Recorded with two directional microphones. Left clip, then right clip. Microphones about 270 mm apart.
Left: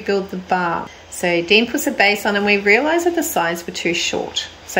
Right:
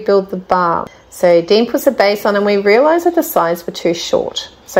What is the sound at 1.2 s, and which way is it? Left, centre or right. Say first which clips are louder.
Speech: right 5 dB; centre.